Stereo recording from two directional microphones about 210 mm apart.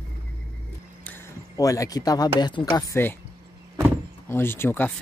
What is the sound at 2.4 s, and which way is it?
Speech, 20° left (ahead or behind).